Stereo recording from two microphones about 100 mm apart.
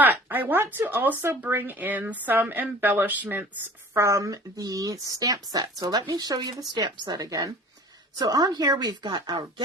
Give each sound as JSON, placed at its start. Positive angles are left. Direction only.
{"t": 0.0, "sound": "speech", "side_deg": -20}
{"t": 3.9, "sound": "a woman's voice", "side_deg": -30}